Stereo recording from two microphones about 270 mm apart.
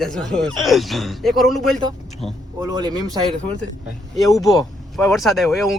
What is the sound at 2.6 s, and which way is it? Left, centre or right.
Speech, centre.